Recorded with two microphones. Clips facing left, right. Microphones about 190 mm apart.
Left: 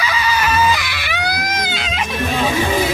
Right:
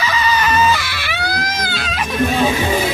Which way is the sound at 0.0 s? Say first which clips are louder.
Right 1 dB; 10° left (ahead or behind).